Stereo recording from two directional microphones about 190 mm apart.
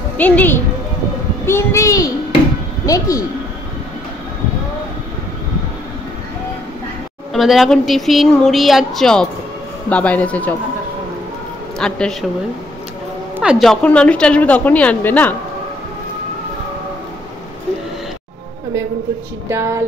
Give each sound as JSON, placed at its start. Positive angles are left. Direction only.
{"t": 0.2, "sound": "a woman's voice", "side_deg": 10}
{"t": 7.3, "sound": "a woman's voice", "side_deg": 0}
{"t": 11.8, "sound": "speech", "side_deg": 5}
{"t": 13.4, "sound": "a woman's voice", "side_deg": 0}
{"t": 19.5, "sound": "music", "side_deg": -15}